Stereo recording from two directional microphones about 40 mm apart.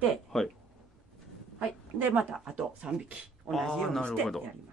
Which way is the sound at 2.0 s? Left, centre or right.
Right.